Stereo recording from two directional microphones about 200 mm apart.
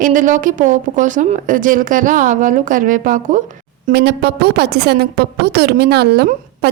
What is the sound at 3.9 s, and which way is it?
A woman's voice, 55° right (ahead or behind).